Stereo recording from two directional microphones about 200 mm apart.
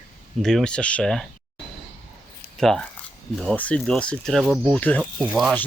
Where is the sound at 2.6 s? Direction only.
Centre (ahead or behind).